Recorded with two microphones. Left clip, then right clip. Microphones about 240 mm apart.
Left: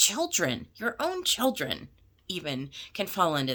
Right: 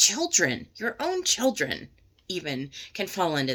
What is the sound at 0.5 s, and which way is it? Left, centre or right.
Speech, left.